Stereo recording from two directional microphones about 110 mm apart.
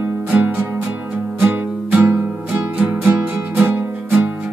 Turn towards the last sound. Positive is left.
turn(degrees=-15)  # may be behind; listen again after turning